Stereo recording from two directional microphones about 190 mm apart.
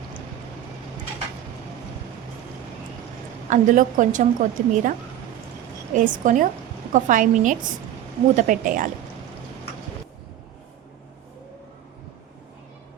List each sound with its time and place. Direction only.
3.5 s a woman's voice: 40° right (ahead or behind)